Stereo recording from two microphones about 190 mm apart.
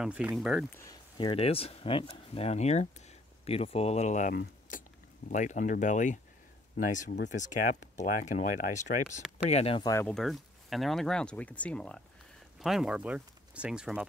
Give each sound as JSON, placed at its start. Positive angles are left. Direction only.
{"t": 0.0, "sound": "speech", "side_deg": -5}
{"t": 0.7, "sound": "speech", "side_deg": 20}
{"t": 4.4, "sound": "keys jangling", "side_deg": 45}
{"t": 5.3, "sound": "speech", "side_deg": 40}
{"t": 9.8, "sound": "speech", "side_deg": 15}
{"t": 10.1, "sound": "speech", "side_deg": 0}